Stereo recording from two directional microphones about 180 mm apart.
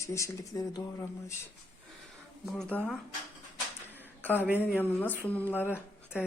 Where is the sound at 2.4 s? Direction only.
Centre (ahead or behind).